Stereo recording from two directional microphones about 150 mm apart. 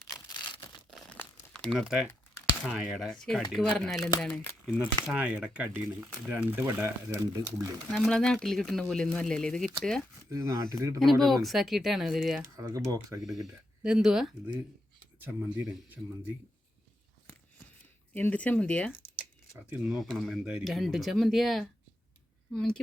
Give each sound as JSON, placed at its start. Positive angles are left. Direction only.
{"t": 0.3, "sound": "a sound", "side_deg": 30}
{"t": 0.9, "sound": "crumpling", "side_deg": 5}
{"t": 2.6, "sound": "speech", "side_deg": -5}
{"t": 7.9, "sound": "speech", "side_deg": 5}
{"t": 10.2, "sound": "speech", "side_deg": -20}
{"t": 11.0, "sound": "speech", "side_deg": 0}
{"t": 12.5, "sound": "speech", "side_deg": -20}
{"t": 13.2, "sound": "speech", "side_deg": 0}
{"t": 15.2, "sound": "speech", "side_deg": -15}
{"t": 18.1, "sound": "speech", "side_deg": 10}